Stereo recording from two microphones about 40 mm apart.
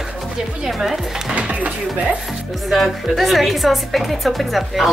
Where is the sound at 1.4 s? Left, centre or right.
Right.